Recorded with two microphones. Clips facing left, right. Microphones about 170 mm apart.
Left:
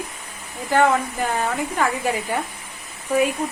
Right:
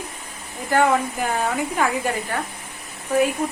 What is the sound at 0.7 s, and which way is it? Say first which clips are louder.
Speech: even; centre (ahead or behind).